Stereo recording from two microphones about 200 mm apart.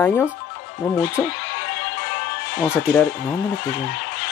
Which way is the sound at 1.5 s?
60° left (ahead or behind).